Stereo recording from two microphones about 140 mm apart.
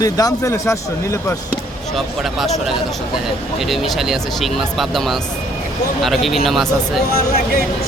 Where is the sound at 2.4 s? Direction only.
Centre (ahead or behind).